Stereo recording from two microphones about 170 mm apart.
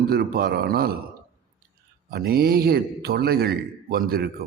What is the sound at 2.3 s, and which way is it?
A man's voice, 65° right (ahead or behind).